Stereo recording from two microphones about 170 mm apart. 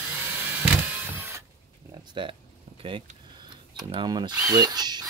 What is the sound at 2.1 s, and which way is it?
Speech, 30° right (ahead or behind).